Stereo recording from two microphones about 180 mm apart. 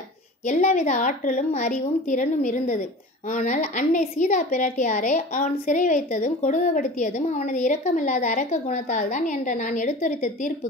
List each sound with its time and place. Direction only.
0.5 s a woman's voice: 45° left (ahead or behind)